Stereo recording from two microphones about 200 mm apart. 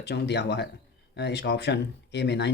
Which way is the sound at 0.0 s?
55° left (ahead or behind).